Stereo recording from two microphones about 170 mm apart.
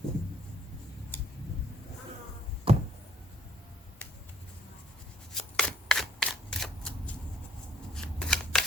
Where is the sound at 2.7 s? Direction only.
35° right (ahead or behind).